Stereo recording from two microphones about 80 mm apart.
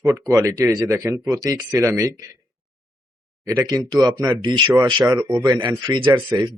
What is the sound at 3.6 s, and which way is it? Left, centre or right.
Speech, right.